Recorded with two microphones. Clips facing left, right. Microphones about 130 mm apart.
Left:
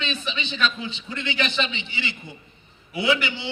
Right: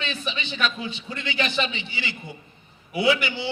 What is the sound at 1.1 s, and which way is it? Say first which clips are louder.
A man's voice: even; 20° left (ahead or behind).